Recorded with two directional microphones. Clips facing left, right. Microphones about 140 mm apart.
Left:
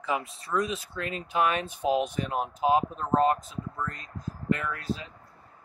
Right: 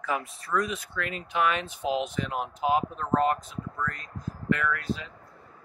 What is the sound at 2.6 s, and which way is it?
Speech, 30° left (ahead or behind).